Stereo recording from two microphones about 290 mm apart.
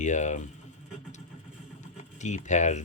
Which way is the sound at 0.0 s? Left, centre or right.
Left.